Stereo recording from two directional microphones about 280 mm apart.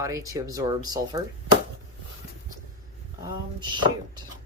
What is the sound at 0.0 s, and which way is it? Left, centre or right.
Speech, centre.